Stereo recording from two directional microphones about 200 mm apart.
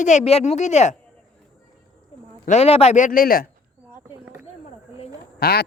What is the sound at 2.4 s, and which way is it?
Speech, 30° left (ahead or behind).